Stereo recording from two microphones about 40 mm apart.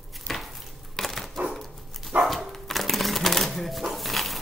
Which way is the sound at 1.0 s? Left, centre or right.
Centre.